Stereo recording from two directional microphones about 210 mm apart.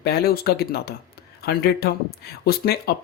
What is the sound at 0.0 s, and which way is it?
Speech, 50° left (ahead or behind).